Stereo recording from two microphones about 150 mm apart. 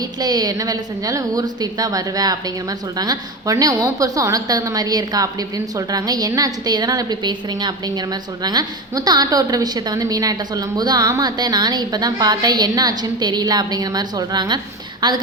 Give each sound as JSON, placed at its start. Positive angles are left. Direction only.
{"t": 0.2, "sound": "a woman's voice", "side_deg": -25}